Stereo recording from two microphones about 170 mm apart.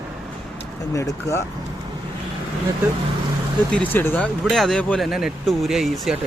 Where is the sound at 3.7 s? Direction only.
10° left (ahead or behind).